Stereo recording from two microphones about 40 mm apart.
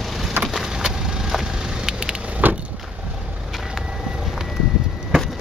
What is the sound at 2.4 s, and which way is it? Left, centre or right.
Vehicle, right.